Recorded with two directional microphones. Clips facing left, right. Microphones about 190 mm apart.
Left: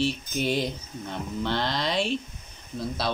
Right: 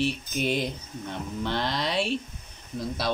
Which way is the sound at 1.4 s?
10° right (ahead or behind).